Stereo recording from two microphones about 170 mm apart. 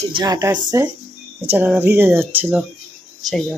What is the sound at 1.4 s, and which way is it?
A woman's voice, 10° right (ahead or behind).